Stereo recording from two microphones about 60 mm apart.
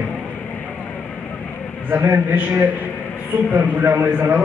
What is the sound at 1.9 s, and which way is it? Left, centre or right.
A man's voice, right.